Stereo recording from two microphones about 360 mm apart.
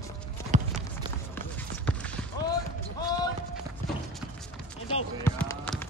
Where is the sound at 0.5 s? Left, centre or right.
Centre.